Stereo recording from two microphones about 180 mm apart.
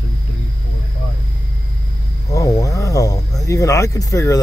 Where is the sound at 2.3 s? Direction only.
20° left (ahead or behind).